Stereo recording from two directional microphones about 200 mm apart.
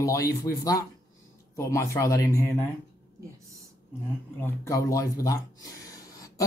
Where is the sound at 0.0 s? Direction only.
15° left (ahead or behind).